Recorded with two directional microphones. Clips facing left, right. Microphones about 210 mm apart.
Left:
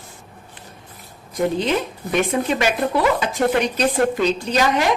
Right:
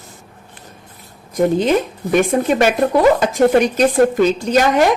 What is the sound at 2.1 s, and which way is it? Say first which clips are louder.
A woman's voice: right 5 dB; 45° right (ahead or behind).